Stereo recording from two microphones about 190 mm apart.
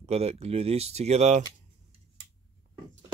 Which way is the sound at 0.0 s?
35° right (ahead or behind).